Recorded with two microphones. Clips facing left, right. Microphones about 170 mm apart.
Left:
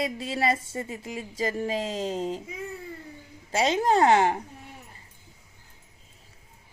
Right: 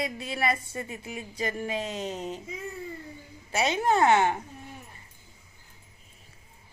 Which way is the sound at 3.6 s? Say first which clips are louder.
Left 2 dB; 35° left (ahead or behind).